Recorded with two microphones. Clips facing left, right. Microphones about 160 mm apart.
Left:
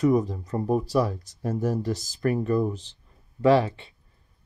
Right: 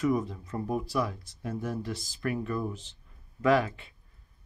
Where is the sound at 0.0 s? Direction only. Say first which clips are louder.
Left 6 dB; 35° left (ahead or behind).